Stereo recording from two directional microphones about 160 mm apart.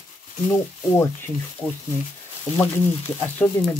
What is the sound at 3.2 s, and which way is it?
Speech, 10° left (ahead or behind).